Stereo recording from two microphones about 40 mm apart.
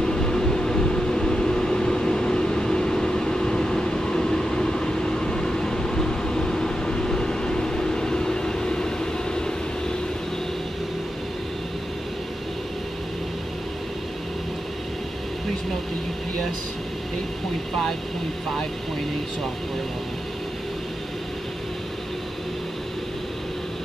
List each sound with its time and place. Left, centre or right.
0.0 s vehicle: centre